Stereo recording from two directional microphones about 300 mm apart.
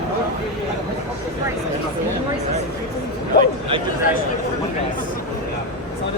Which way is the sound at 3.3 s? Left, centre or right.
Left.